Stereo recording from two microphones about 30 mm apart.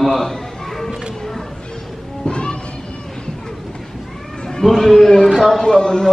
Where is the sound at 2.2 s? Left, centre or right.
Left.